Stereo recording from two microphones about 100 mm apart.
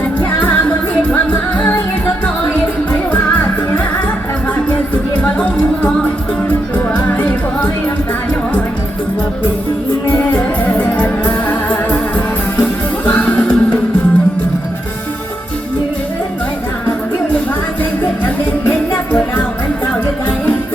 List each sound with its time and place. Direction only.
1.1 s music: 15° left (ahead or behind)
2.9 s music: 15° left (ahead or behind)
5.2 s music: 15° left (ahead or behind)
10.1 s music: 15° left (ahead or behind)
13.1 s music: 15° left (ahead or behind)